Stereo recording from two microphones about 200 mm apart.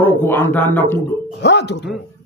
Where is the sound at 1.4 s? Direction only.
60° left (ahead or behind).